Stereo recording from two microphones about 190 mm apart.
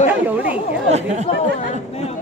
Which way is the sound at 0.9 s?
35° right (ahead or behind).